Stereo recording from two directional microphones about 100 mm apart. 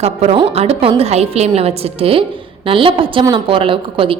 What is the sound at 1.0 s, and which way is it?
A woman's voice, 90° right.